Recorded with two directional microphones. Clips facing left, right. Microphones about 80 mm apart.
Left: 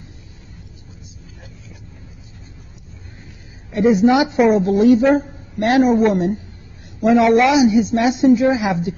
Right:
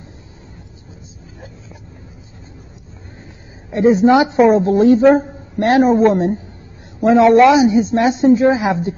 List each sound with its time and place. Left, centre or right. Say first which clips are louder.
3.7 s speech: right 2 dB; right